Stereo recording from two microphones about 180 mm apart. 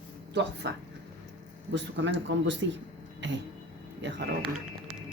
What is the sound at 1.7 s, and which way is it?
Speech, 90° right.